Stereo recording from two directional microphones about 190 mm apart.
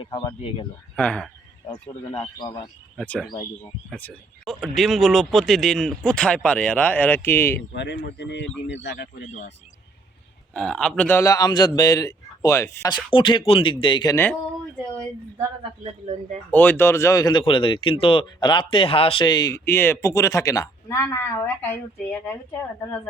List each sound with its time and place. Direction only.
0.0 s speech: 20° left (ahead or behind)
0.9 s speech: 5° left (ahead or behind)
1.9 s speech: 30° left (ahead or behind)
3.0 s speech: 5° left (ahead or behind)
7.7 s a man's voice: 65° left (ahead or behind)
10.5 s speech: 5° left (ahead or behind)
13.1 s speech: 25° left (ahead or behind)
16.5 s speech: 10° left (ahead or behind)